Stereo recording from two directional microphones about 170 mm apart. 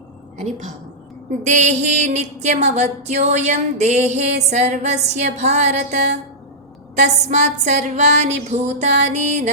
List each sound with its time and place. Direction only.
0.3 s a woman's voice: 45° right (ahead or behind)
1.5 s music: 45° right (ahead or behind)
6.9 s a woman's voice: 40° right (ahead or behind)